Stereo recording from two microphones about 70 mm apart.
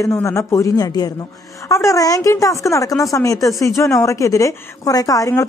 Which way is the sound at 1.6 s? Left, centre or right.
Left.